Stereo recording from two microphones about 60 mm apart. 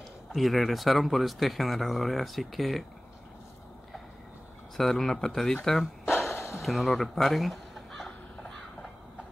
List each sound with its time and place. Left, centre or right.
0.3 s speech: centre
4.7 s speech: centre
6.0 s a sound: left
6.6 s speech: centre